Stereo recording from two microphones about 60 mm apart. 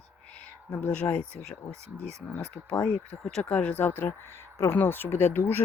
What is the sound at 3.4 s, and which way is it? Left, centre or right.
Speech, left.